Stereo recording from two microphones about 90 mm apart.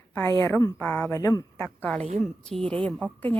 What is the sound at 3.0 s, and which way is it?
Speech, 20° left (ahead or behind).